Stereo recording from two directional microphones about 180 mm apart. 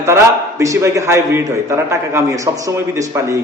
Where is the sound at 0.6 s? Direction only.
15° right (ahead or behind).